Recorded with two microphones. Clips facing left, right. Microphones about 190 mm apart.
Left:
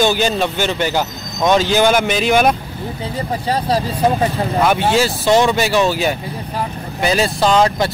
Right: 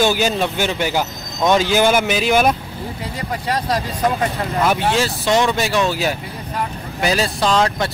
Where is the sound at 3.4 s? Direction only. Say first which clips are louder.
Left 3 dB; 30° left (ahead or behind).